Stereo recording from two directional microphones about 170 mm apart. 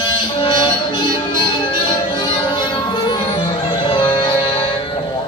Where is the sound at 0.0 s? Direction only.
25° left (ahead or behind).